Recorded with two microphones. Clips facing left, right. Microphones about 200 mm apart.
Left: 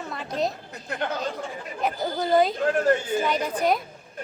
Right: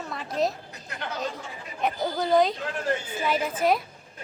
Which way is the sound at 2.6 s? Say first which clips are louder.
Left 8 dB; 50° left (ahead or behind).